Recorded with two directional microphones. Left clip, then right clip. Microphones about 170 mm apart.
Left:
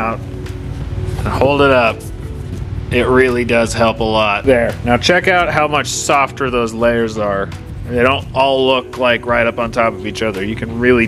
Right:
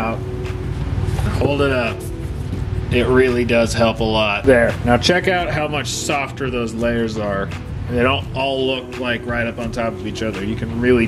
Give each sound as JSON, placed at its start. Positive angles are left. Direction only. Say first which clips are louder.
{"t": 1.4, "sound": "speech", "louder": "left 8 dB", "side_deg": -15}
{"t": 2.9, "sound": "speech", "louder": "left 3 dB", "side_deg": 15}
{"t": 4.5, "sound": "speech", "louder": "left 1 dB", "side_deg": 5}
{"t": 8.5, "sound": "speech", "louder": "left 6 dB", "side_deg": -15}
{"t": 10.8, "sound": "speech", "louder": "left 4 dB", "side_deg": 15}